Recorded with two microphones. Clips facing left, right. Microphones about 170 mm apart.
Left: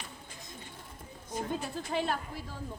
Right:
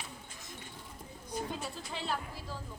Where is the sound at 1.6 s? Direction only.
55° left (ahead or behind).